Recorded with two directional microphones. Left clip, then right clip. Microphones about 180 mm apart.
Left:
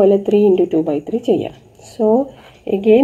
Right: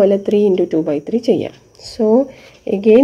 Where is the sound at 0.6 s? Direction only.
25° right (ahead or behind).